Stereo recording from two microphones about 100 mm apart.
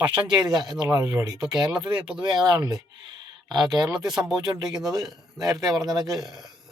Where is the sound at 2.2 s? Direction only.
45° right (ahead or behind).